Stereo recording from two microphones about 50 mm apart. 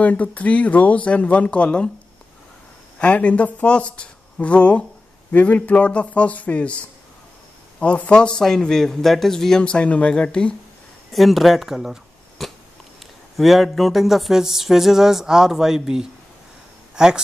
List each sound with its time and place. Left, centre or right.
0.0 s speech: left
3.0 s speech: left
11.1 s speech: centre
12.4 s cat: centre
13.4 s a sound: centre
16.9 s speech: centre